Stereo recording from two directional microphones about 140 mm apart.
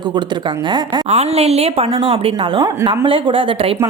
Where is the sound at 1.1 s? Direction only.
50° right (ahead or behind); by 3.1 s 25° right (ahead or behind).